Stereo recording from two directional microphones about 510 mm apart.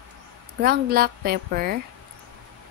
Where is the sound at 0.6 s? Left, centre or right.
Centre.